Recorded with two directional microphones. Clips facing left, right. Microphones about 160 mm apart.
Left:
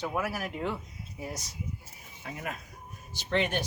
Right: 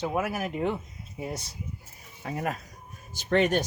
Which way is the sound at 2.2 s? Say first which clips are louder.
Right 7 dB; 40° right (ahead or behind).